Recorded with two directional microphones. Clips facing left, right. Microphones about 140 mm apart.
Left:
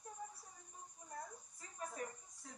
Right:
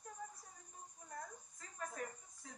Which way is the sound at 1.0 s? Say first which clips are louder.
Even; 10° left (ahead or behind).